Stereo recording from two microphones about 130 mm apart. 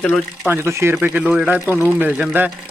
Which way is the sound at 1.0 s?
10° right (ahead or behind).